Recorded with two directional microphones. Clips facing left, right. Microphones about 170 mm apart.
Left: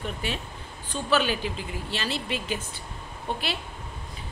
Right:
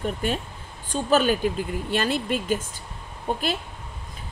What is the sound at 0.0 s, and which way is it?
A woman's voice, 45° right (ahead or behind).